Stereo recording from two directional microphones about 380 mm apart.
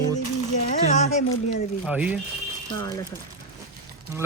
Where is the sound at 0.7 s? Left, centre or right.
Centre.